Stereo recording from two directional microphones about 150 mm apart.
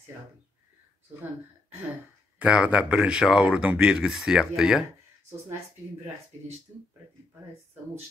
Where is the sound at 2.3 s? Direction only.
5° right (ahead or behind).